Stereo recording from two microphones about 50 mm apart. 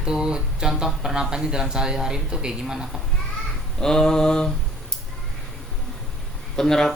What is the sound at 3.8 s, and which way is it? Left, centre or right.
Speech, centre.